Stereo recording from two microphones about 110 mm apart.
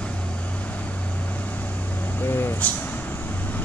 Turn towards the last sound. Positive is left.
turn(degrees=15)  # may be behind; listen again after turning